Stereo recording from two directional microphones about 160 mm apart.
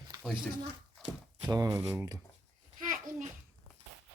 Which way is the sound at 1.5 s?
20° right (ahead or behind).